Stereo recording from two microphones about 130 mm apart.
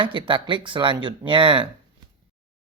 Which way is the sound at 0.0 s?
40° right (ahead or behind).